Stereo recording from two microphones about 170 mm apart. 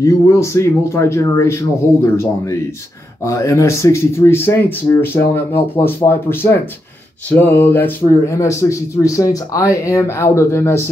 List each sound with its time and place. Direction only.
0.0 s speech: 15° left (ahead or behind)
3.3 s speech: 20° left (ahead or behind)